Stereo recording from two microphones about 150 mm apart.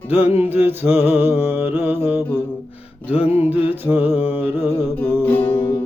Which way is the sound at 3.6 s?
15° right (ahead or behind).